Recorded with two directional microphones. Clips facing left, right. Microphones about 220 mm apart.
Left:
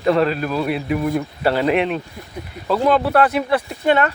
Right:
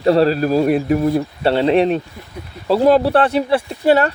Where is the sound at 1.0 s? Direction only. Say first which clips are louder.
Right 3 dB; 30° right (ahead or behind).